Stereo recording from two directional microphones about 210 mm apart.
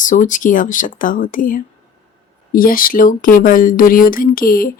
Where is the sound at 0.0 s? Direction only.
35° left (ahead or behind).